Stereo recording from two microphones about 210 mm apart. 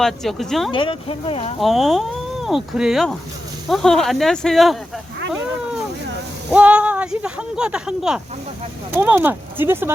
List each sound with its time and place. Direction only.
0.0 s speech: centre (ahead or behind)
0.7 s speech: 25° left (ahead or behind)
1.5 s speech: centre (ahead or behind)
6.5 s speech: 5° right (ahead or behind)